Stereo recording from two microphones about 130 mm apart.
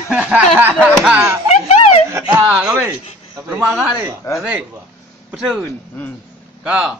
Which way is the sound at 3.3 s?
20° right (ahead or behind).